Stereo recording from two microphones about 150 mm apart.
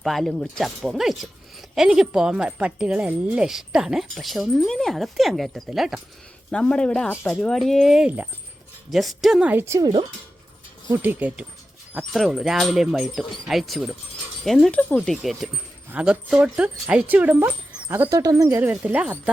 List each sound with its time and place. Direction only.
0.0 s a woman's voice: centre (ahead or behind); by 9.9 s 20° right (ahead or behind)
10.9 s a woman's voice: 10° right (ahead or behind)
18.2 s a woman's voice: 25° right (ahead or behind); by 19.1 s 10° right (ahead or behind)